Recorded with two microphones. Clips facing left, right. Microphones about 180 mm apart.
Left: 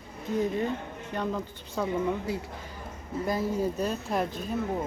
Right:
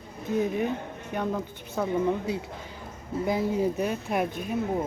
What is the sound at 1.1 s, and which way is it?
Speech, 10° right (ahead or behind).